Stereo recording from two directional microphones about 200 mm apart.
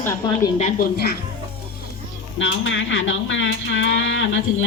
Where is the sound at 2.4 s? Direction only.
70° left (ahead or behind).